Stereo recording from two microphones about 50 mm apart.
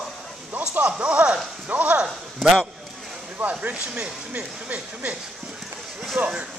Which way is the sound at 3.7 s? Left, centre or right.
Right.